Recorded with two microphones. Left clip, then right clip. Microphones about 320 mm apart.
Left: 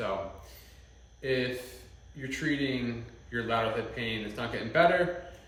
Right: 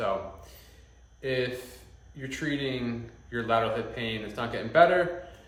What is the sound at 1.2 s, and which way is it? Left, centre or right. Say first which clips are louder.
A man's voice: right 1 dB; centre.